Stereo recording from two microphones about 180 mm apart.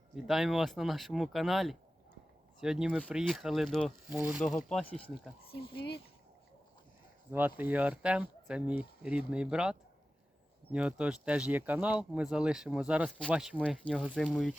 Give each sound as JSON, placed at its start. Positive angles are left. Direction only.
{"t": 0.2, "sound": "speech", "side_deg": 0}
{"t": 4.1, "sound": "speech", "side_deg": -10}
{"t": 4.9, "sound": "speech", "side_deg": 30}
{"t": 7.3, "sound": "speech", "side_deg": -10}